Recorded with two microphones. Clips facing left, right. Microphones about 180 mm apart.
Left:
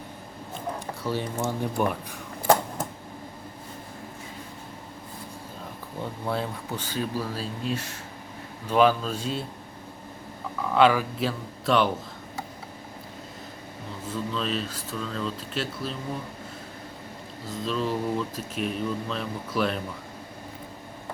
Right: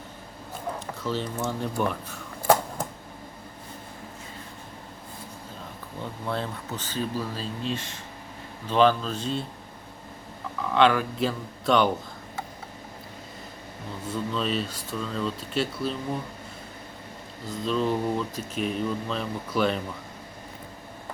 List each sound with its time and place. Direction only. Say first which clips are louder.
1.0 s speech: left 1 dB; 10° left (ahead or behind)
6.2 s speech: left 1 dB; 10° left (ahead or behind)
10.6 s speech: left 1 dB; 5° left (ahead or behind)
14.1 s speech: right 1 dB; centre (ahead or behind)
17.6 s speech: right 2 dB; centre (ahead or behind)